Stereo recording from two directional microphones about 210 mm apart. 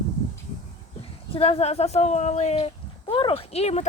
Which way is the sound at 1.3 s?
25° left (ahead or behind).